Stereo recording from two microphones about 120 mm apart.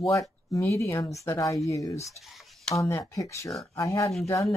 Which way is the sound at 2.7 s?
25° left (ahead or behind).